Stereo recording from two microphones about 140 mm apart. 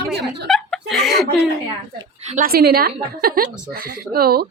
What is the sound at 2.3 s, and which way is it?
A woman's voice, 85° right.